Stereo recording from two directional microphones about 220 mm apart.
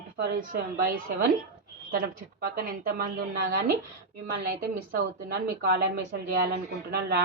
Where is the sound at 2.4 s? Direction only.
40° right (ahead or behind).